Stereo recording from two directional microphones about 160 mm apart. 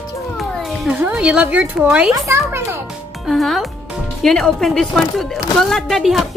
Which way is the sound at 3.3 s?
Centre (ahead or behind).